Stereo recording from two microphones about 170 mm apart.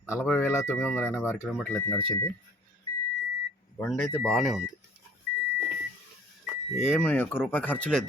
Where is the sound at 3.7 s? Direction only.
10° left (ahead or behind).